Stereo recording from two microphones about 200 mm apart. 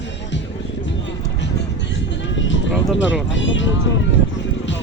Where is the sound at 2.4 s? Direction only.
70° left (ahead or behind).